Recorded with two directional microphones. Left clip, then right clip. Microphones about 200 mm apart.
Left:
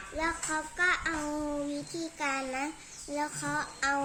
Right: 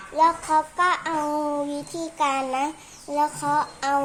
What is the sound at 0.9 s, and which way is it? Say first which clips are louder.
Child singing: right 6 dB; 35° right (ahead or behind).